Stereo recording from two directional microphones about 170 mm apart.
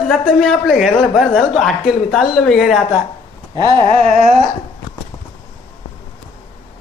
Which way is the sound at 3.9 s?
40° right (ahead or behind).